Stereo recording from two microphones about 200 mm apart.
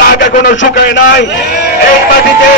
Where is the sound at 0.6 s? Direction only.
60° left (ahead or behind).